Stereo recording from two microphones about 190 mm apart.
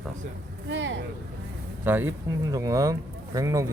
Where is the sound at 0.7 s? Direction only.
75° right (ahead or behind).